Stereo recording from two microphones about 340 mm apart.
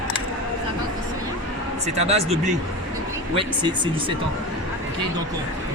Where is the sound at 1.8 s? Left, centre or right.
Centre.